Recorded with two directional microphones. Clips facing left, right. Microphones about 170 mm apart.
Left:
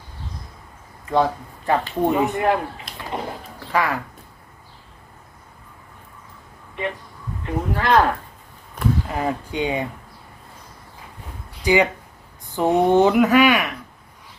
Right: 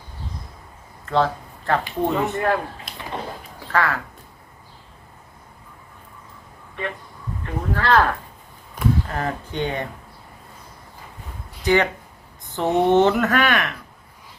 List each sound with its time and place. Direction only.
1.0 s speech: 15° left (ahead or behind)
3.7 s speech: 15° left (ahead or behind)
7.4 s speech: 15° left (ahead or behind)
11.6 s speech: 10° left (ahead or behind)
12.4 s a sound: 10° left (ahead or behind)
12.7 s speech: 5° left (ahead or behind)